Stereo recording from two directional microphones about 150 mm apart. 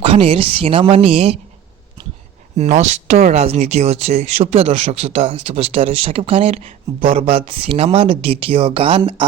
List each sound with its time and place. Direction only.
0.0 s speech: 40° right (ahead or behind)
2.6 s speech: 50° right (ahead or behind)